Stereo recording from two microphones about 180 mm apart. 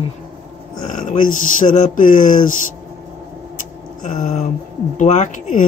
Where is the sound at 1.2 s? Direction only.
45° left (ahead or behind).